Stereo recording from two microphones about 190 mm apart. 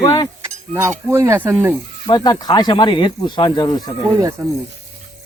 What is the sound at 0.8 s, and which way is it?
Speech, 15° right (ahead or behind).